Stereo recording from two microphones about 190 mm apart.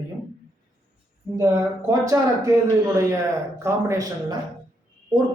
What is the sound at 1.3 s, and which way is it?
Speech, 15° right (ahead or behind).